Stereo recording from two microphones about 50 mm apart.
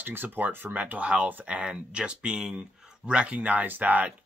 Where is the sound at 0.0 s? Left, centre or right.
Right.